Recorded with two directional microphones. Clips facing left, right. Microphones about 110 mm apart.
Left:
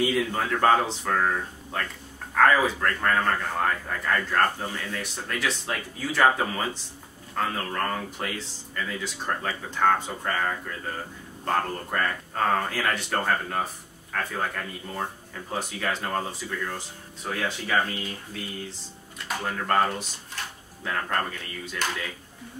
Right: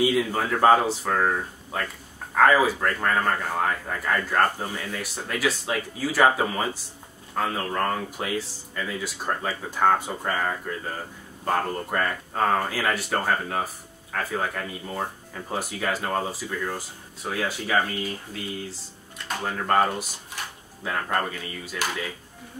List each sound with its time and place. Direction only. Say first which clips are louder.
0.0 s speech: right 2 dB; 10° right (ahead or behind)